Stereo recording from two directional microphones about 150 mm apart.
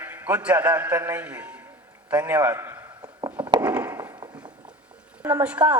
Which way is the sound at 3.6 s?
10° right (ahead or behind).